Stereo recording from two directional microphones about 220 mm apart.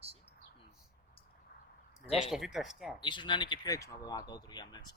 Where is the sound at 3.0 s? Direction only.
20° left (ahead or behind).